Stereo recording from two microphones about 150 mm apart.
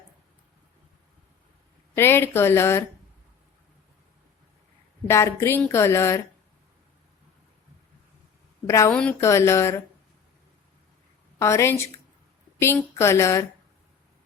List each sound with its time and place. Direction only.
2.0 s speech: 15° left (ahead or behind)
5.0 s speech: 15° left (ahead or behind)
8.6 s a woman's voice: 20° left (ahead or behind)
8.9 s speech: 5° left (ahead or behind)
9.2 s speech: 20° left (ahead or behind)
11.3 s a woman's voice: 20° left (ahead or behind)